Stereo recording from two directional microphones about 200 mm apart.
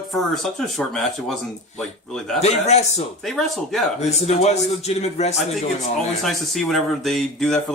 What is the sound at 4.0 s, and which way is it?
A man's voice, 35° left (ahead or behind).